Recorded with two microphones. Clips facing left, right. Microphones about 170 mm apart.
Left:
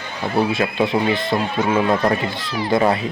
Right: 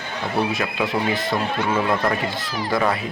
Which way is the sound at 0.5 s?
25° left (ahead or behind).